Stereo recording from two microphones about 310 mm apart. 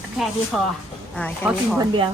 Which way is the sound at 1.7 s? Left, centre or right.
Centre.